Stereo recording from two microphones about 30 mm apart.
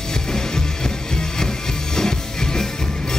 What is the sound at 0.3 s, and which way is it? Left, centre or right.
Music, left.